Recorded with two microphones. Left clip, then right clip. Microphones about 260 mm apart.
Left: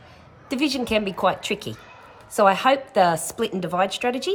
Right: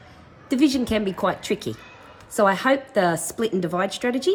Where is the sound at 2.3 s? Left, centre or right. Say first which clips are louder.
Left 2 dB; left.